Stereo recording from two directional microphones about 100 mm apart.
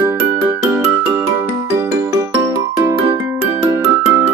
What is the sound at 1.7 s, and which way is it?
Music, 30° right (ahead or behind).